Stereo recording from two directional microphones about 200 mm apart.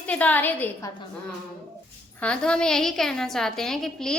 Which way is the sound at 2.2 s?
5° left (ahead or behind).